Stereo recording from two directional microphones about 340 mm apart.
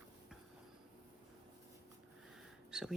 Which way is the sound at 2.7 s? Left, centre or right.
Centre.